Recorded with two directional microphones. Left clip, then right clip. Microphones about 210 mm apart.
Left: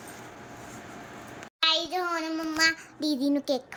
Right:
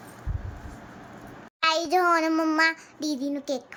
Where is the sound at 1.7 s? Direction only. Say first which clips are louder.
Right 6 dB; 25° right (ahead or behind).